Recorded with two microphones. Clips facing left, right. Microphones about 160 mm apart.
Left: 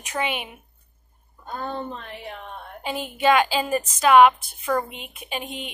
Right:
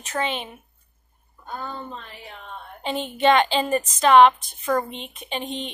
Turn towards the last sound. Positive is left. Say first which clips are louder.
# right 2 dB
turn(degrees=10)  # may be behind; listen again after turning